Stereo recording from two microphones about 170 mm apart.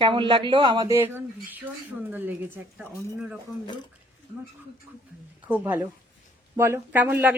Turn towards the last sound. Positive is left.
turn(degrees=-10)  # may be behind; listen again after turning